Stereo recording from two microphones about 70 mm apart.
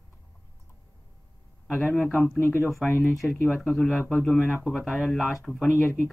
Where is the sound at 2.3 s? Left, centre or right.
Left.